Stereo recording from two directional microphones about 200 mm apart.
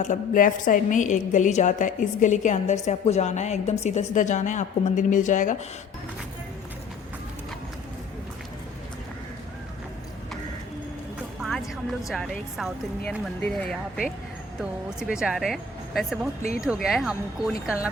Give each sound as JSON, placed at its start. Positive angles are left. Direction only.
{"t": 0.0, "sound": "a woman's voice", "side_deg": 40}
{"t": 11.9, "sound": "speech", "side_deg": 0}